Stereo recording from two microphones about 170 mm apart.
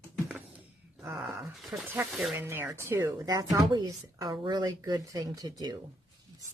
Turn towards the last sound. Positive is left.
turn(degrees=-25)  # may be behind; listen again after turning